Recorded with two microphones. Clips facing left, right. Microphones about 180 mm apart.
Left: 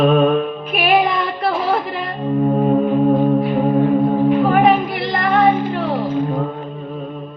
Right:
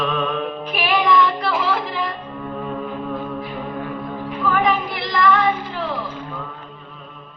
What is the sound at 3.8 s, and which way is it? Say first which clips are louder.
A capella: left 14 dB; 40° left (ahead or behind).